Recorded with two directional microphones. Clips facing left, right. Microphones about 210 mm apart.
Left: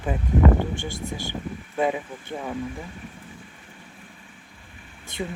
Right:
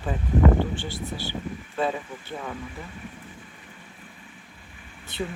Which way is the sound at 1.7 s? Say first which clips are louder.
Left 3 dB; 15° left (ahead or behind).